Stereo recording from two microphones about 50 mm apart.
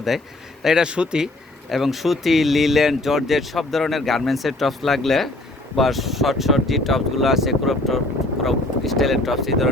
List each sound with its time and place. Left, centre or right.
0.6 s speech: centre
1.7 s speech: centre